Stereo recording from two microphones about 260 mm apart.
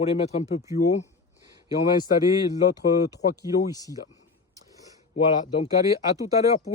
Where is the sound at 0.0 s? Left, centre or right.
Left.